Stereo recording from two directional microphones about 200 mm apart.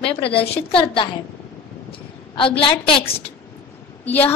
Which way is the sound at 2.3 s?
25° left (ahead or behind).